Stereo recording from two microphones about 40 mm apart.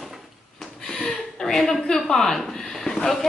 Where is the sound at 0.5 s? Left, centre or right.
Centre.